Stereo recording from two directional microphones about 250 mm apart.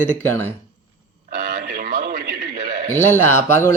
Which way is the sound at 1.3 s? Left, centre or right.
Right.